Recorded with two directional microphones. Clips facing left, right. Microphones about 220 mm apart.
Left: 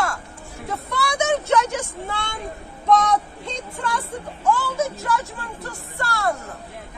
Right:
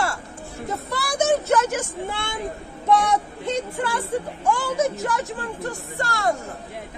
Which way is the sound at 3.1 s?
10° right (ahead or behind).